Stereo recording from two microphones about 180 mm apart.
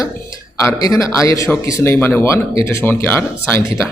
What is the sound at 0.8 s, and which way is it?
Speech, 20° left (ahead or behind).